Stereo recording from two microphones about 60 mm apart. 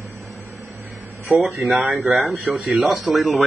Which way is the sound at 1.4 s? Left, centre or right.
Centre.